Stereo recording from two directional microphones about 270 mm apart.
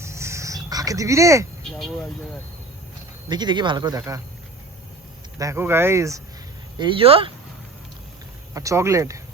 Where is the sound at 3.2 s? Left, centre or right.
Centre.